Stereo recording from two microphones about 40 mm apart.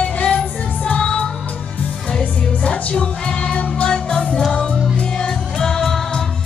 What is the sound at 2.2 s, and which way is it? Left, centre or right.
Music, left.